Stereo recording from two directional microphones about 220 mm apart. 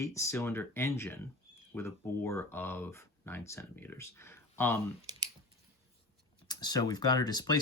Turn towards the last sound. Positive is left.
turn(degrees=20)  # may be behind; listen again after turning